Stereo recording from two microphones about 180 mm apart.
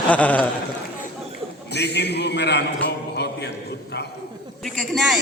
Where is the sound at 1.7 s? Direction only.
70° left (ahead or behind).